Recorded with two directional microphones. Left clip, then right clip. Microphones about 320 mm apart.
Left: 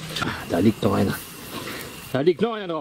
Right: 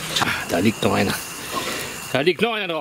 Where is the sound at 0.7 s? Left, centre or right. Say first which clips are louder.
Right 3 dB; right.